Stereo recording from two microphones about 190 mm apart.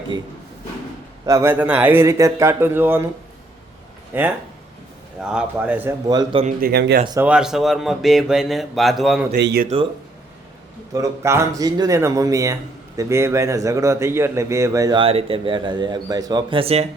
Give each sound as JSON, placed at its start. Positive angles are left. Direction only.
{"t": 1.2, "sound": "a man's voice", "side_deg": -15}
{"t": 4.1, "sound": "a man's voice", "side_deg": -10}
{"t": 6.6, "sound": "speech", "side_deg": -55}
{"t": 7.2, "sound": "speech", "side_deg": -5}
{"t": 9.3, "sound": "speech", "side_deg": -55}
{"t": 10.9, "sound": "a man's voice", "side_deg": -15}